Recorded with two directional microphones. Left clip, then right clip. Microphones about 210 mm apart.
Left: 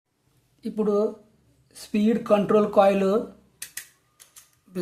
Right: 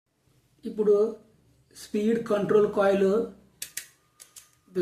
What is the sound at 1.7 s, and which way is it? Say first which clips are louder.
Speech: left 2 dB; 40° left (ahead or behind).